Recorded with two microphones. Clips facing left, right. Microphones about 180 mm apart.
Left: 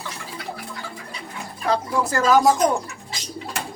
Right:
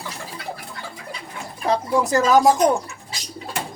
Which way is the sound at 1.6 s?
20° right (ahead or behind).